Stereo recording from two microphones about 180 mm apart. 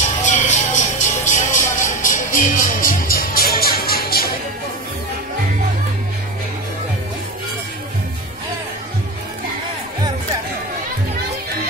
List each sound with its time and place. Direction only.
0.0 s music: 40° left (ahead or behind)